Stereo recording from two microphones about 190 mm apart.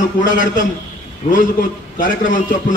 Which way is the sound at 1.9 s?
45° left (ahead or behind).